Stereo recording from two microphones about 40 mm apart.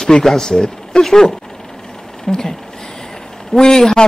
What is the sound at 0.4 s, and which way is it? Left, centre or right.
Speech, centre.